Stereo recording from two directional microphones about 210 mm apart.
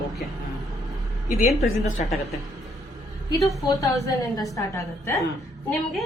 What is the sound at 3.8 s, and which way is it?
A woman's voice, 15° left (ahead or behind).